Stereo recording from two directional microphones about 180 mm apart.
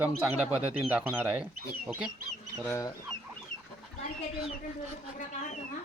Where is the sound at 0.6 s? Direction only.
35° right (ahead or behind).